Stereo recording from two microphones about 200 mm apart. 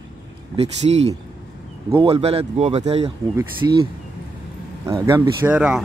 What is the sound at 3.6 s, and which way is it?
Speech, 15° right (ahead or behind).